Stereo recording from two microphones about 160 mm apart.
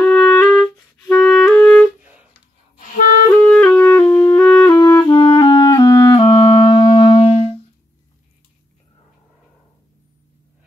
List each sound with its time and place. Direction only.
0.0 s music: 5° left (ahead or behind)
0.4 s clarinet: 5° left (ahead or behind)
2.0 s a sound: 10° right (ahead or behind)
3.4 s music: 10° left (ahead or behind)
4.7 s clarinet: 20° left (ahead or behind)
7.2 s music: 40° left (ahead or behind)